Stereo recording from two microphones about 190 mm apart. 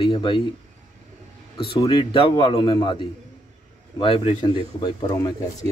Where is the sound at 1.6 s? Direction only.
25° left (ahead or behind).